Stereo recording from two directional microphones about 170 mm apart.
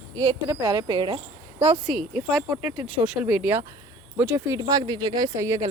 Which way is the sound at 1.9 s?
Centre (ahead or behind).